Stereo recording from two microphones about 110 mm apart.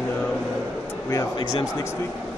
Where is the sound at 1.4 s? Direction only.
40° left (ahead or behind).